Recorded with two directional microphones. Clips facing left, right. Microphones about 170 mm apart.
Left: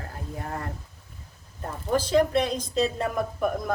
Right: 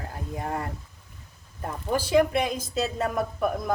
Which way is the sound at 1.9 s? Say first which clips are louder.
Even; 10° right (ahead or behind).